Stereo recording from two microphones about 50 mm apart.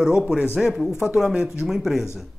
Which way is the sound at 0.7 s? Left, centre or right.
Centre.